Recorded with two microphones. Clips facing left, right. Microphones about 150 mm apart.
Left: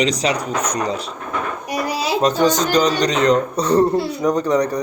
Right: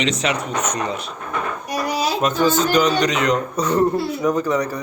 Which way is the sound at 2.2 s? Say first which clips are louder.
Left 2 dB; 35° left (ahead or behind).